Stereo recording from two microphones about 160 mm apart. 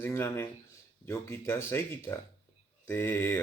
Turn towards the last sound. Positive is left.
turn(degrees=15)  # may be behind; listen again after turning